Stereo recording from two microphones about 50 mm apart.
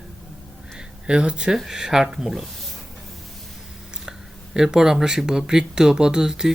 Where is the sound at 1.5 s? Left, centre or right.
Centre.